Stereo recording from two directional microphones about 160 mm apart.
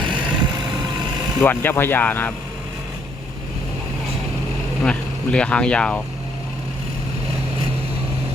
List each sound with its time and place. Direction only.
0.0 s vehicle: 30° right (ahead or behind)
1.4 s speech: 15° left (ahead or behind)
4.8 s speech: 5° left (ahead or behind)